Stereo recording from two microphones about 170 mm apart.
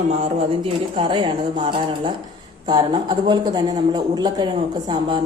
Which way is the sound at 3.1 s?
25° right (ahead or behind).